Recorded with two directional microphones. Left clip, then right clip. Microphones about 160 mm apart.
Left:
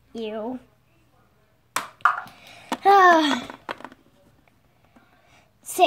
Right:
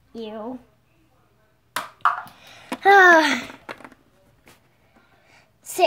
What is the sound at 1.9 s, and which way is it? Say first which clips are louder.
Babbling: even; 5° right (ahead or behind).